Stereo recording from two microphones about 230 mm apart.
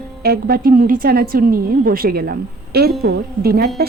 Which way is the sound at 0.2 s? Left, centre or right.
Right.